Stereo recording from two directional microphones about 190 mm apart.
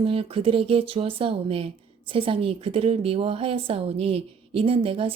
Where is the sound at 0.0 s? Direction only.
30° right (ahead or behind).